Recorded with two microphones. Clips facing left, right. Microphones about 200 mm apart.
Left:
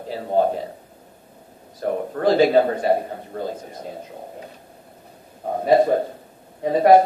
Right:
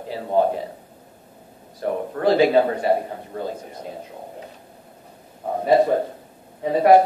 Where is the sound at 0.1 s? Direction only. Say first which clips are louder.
Even; 40° left (ahead or behind).